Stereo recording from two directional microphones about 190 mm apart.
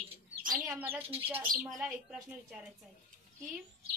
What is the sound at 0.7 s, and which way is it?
A woman's voice, 10° right (ahead or behind).